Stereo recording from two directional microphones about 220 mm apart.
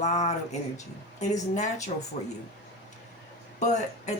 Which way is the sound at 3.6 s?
35° left (ahead or behind).